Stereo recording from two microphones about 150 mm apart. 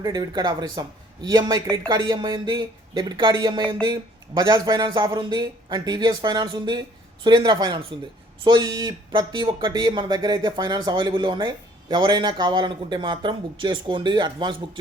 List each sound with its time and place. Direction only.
0.0 s speech: 25° right (ahead or behind)